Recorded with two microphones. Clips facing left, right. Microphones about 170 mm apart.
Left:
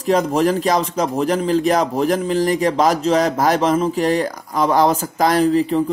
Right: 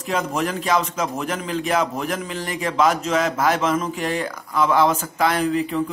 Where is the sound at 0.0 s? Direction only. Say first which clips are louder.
Left 7 dB; 35° left (ahead or behind).